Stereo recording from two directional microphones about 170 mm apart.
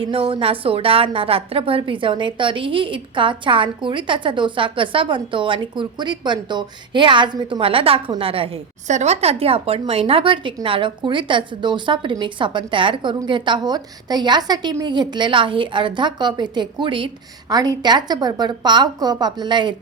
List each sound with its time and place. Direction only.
0.0 s a woman's voice: 30° right (ahead or behind)